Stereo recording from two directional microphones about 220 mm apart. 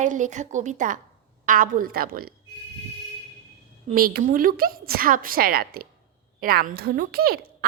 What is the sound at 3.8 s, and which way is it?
A woman's voice, 40° right (ahead or behind).